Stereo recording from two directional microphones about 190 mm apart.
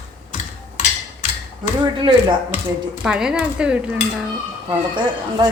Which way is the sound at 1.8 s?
25° right (ahead or behind).